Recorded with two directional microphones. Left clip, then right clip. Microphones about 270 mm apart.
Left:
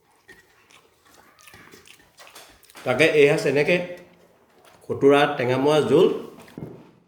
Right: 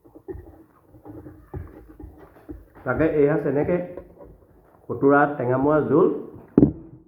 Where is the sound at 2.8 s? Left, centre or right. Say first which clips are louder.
Left 3 dB; left.